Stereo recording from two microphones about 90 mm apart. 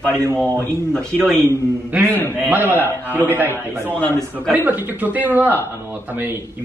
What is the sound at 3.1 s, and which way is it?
Speech, 20° right (ahead or behind).